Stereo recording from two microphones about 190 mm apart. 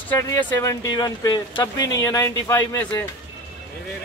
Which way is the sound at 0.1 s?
15° left (ahead or behind).